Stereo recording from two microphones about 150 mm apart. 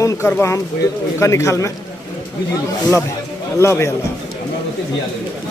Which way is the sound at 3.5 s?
20° left (ahead or behind).